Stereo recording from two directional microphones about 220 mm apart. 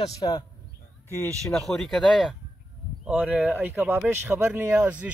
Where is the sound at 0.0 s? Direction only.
20° left (ahead or behind).